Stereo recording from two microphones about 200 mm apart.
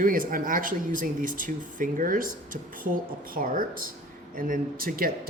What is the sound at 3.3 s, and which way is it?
Speech, 45° right (ahead or behind).